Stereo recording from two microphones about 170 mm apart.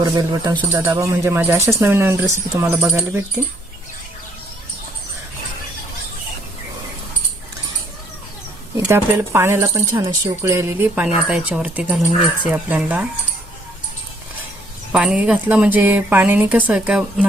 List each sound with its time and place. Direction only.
0.0 s speech: 25° right (ahead or behind); by 3.2 s 10° right (ahead or behind)
8.8 s speech: 15° right (ahead or behind)
14.9 s speech: 5° right (ahead or behind)